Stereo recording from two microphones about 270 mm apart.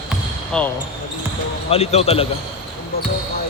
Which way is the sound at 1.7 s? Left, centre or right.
Left.